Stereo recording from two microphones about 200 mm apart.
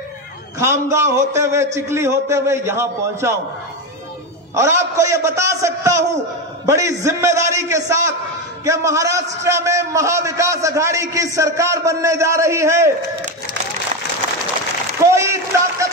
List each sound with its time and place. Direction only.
0.6 s a man's voice: 15° right (ahead or behind)
4.6 s a man's voice: 15° right (ahead or behind)
15.0 s a sound: 15° right (ahead or behind)